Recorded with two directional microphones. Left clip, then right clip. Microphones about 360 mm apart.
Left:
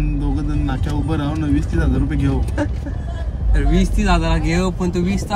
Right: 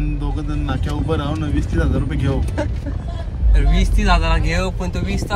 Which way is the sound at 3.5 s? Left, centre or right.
Centre.